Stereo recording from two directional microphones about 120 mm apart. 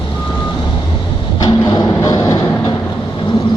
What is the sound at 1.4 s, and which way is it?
Music, 35° left (ahead or behind).